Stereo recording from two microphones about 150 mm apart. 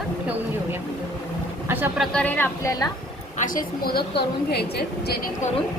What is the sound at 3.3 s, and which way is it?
A woman's voice, 65° left (ahead or behind).